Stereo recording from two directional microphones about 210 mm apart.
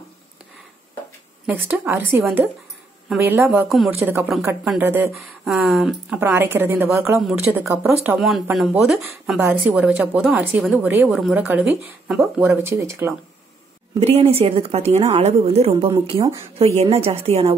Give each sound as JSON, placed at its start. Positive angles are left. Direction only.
{"t": 1.5, "sound": "speech", "side_deg": -10}
{"t": 3.4, "sound": "speech", "side_deg": 0}
{"t": 4.0, "sound": "speech", "side_deg": -10}
{"t": 7.2, "sound": "speech", "side_deg": 0}
{"t": 7.5, "sound": "speech", "side_deg": -10}
{"t": 13.9, "sound": "speech", "side_deg": -30}
{"t": 16.5, "sound": "speech", "side_deg": -30}